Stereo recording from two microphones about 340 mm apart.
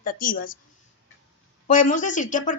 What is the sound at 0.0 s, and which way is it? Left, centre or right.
Speech, left.